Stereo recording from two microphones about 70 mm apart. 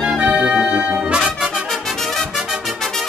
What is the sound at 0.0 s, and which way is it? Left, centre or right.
Music, centre.